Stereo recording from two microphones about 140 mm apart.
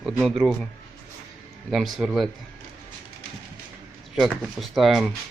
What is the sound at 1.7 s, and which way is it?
Speech, centre (ahead or behind).